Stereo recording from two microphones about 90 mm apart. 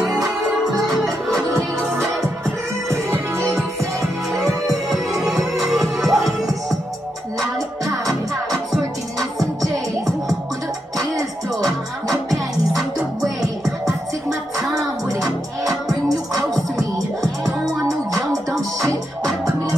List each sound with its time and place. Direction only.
4.4 s music: centre (ahead or behind)
9.2 s music: 40° right (ahead or behind)
12.7 s music: centre (ahead or behind)
15.0 s music: 40° right (ahead or behind)
17.8 s music: 40° right (ahead or behind)